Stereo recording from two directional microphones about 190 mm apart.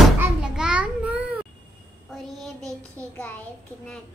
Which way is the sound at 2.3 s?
Centre (ahead or behind).